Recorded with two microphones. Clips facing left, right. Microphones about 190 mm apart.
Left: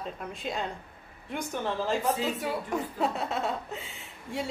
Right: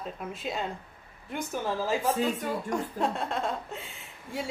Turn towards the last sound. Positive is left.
turn(degrees=0)  # may be behind; listen again after turning